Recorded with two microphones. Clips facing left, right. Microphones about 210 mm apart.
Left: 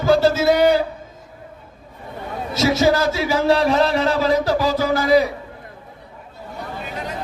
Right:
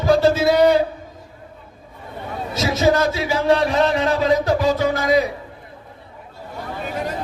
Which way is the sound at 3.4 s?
30° left (ahead or behind).